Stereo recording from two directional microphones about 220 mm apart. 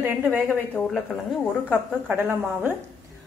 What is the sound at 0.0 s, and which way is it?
Speech, 10° right (ahead or behind).